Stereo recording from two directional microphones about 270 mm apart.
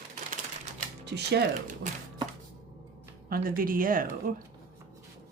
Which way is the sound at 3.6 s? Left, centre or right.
Right.